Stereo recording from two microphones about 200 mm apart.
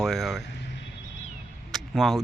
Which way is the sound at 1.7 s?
Centre (ahead or behind).